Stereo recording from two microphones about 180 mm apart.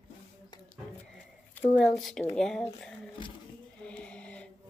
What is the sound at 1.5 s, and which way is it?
A woman's voice, 5° left (ahead or behind).